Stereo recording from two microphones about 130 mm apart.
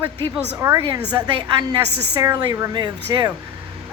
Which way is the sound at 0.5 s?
20° right (ahead or behind).